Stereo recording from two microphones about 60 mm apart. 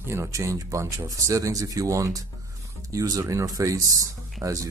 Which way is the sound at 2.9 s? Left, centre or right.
Right.